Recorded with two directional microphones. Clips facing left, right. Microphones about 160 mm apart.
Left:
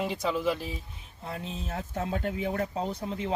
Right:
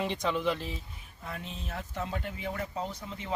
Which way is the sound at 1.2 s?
35° left (ahead or behind).